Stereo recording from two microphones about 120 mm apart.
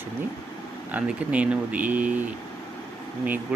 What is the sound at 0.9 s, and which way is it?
Speech, 10° right (ahead or behind).